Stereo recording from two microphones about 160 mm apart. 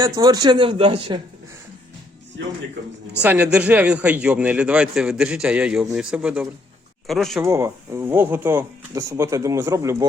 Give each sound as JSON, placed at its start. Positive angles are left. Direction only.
{"t": 0.0, "sound": "speech", "side_deg": -25}
{"t": 3.2, "sound": "a man's voice", "side_deg": -10}
{"t": 7.4, "sound": "a man's voice", "side_deg": -15}